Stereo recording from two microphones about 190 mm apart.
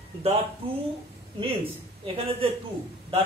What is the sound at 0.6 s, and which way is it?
Speech, 25° right (ahead or behind).